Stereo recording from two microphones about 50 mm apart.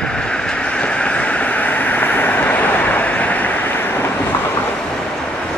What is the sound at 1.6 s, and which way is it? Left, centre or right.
Vehicle, left.